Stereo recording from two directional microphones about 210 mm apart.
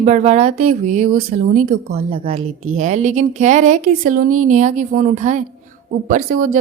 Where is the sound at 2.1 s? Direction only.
30° right (ahead or behind).